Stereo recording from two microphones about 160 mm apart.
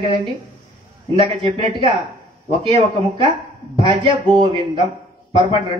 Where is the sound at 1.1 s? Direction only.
35° right (ahead or behind).